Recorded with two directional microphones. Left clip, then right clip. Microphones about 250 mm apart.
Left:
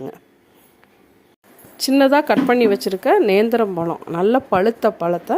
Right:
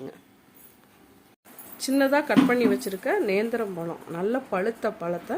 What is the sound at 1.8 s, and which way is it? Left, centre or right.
Speech, left.